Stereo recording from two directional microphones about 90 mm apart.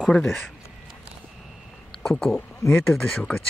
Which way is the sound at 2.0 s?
5° left (ahead or behind).